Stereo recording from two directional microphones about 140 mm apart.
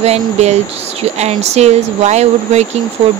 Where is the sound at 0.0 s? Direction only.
50° right (ahead or behind).